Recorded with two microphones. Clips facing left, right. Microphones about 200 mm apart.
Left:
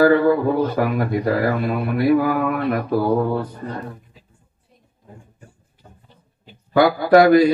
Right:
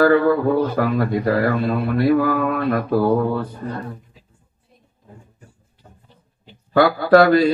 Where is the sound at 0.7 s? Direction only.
20° left (ahead or behind).